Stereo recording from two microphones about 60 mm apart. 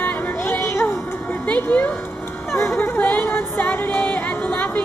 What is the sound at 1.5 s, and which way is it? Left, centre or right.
Speech, left.